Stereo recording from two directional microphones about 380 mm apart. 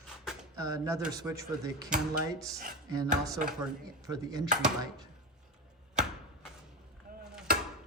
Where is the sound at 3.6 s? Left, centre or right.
Centre.